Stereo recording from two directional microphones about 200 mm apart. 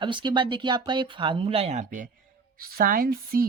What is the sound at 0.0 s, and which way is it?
Speech, 25° right (ahead or behind).